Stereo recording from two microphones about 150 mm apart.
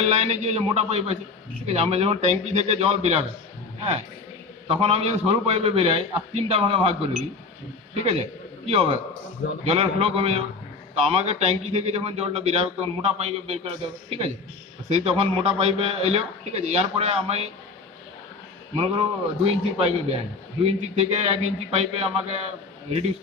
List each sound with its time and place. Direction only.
0.0 s a man's voice: 50° right (ahead or behind)
4.6 s a man's voice: 40° right (ahead or behind)
8.0 s a man's voice: 45° right (ahead or behind)
18.8 s a man's voice: 40° right (ahead or behind)